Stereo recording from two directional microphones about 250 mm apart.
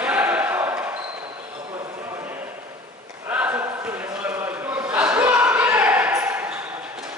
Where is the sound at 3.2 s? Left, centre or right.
Centre.